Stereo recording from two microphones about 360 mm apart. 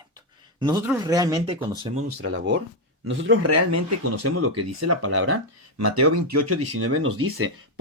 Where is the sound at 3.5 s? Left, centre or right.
Right.